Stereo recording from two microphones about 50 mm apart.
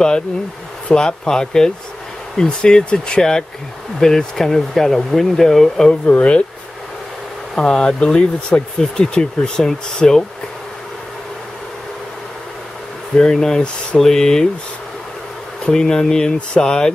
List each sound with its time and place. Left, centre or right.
0.8 s speech: centre
5.9 s speech: left
7.5 s speech: centre
13.1 s speech: centre
15.7 s speech: centre